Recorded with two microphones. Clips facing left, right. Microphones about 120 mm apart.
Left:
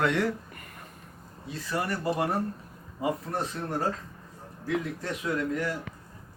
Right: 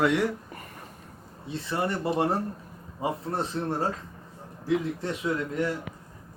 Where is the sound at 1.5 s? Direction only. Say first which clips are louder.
Right 2 dB; 25° right (ahead or behind).